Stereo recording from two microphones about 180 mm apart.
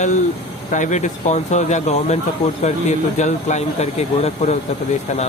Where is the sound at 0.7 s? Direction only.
45° left (ahead or behind).